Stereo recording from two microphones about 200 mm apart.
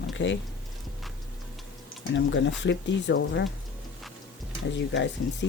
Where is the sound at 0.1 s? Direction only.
65° left (ahead or behind).